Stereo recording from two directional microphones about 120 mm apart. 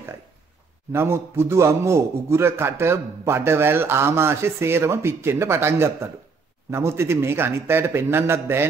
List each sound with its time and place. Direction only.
0.9 s a man's voice: 20° right (ahead or behind)